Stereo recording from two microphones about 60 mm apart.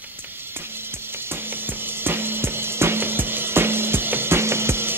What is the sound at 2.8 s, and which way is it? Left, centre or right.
Music, right.